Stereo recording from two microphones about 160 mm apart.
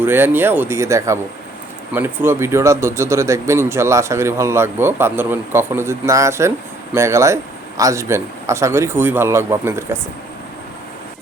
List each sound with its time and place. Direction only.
0.0 s speech: 15° right (ahead or behind)